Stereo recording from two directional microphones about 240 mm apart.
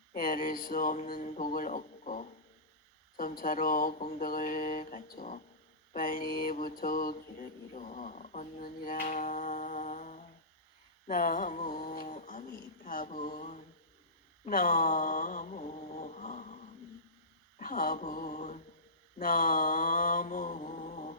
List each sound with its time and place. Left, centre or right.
0.1 s mantra: left
14.4 s a sound: left
17.6 s mantra: left